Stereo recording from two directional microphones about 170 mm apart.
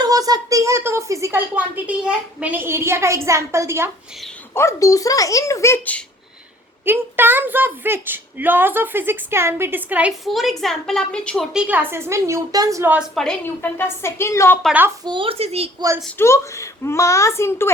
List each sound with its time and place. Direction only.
0.0 s speech: 20° right (ahead or behind)
4.5 s a child's voice: 20° left (ahead or behind)
6.8 s speech: 10° right (ahead or behind); by 11.4 s 5° left (ahead or behind)
11.5 s speech: 10° right (ahead or behind)
13.1 s a woman's voice: 10° left (ahead or behind)
14.6 s speech: 10° right (ahead or behind)
15.0 s speech: 30° right (ahead or behind)
16.1 s a woman's voice: 15° left (ahead or behind)